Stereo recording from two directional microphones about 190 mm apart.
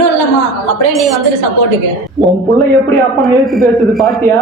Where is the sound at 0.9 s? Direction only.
Centre (ahead or behind).